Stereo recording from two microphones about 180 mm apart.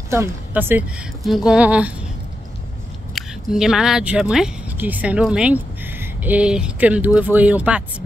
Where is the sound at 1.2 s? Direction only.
Centre (ahead or behind).